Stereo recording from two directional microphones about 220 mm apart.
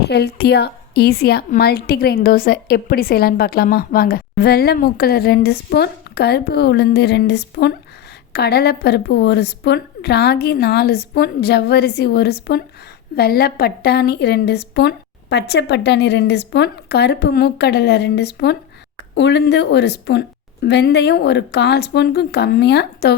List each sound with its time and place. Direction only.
0.1 s a woman's voice: 45° left (ahead or behind)